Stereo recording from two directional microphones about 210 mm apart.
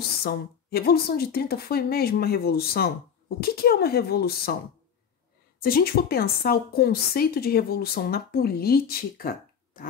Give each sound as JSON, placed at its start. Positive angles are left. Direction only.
{"t": 0.2, "sound": "a woman's voice", "side_deg": 45}
{"t": 5.6, "sound": "a woman's voice", "side_deg": 45}